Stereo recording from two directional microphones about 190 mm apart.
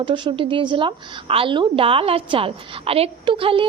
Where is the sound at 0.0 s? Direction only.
25° right (ahead or behind).